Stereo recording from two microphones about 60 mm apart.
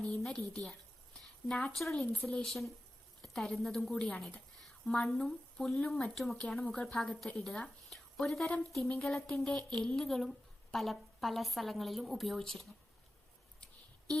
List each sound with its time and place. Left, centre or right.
0.3 s speech: centre
1.7 s a woman's voice: centre
3.9 s speech: centre
4.9 s a woman's voice: centre